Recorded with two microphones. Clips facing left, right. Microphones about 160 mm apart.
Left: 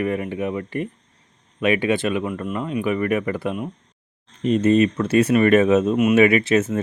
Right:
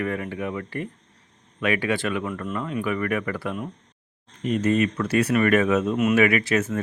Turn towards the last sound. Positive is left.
turn(degrees=25)  # may be behind; listen again after turning